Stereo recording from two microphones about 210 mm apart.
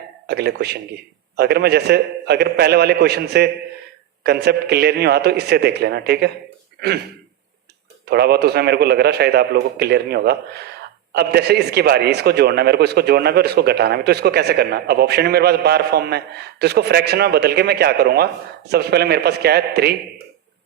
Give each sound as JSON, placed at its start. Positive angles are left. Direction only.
{"t": 0.3, "sound": "a man's voice", "side_deg": -50}
{"t": 8.0, "sound": "a man's voice", "side_deg": -50}